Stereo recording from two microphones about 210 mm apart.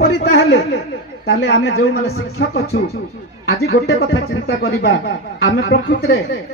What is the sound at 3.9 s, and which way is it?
Speech, 50° left (ahead or behind).